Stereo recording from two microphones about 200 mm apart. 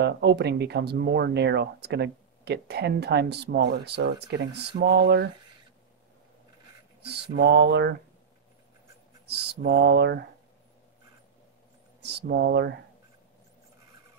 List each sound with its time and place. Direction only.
0.0 s speech: 60° right (ahead or behind)
7.3 s speech: 55° right (ahead or behind)
9.2 s speech: 55° right (ahead or behind)
12.0 s speech: 55° right (ahead or behind)